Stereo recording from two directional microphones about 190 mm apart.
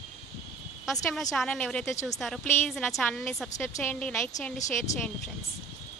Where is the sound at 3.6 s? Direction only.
10° left (ahead or behind).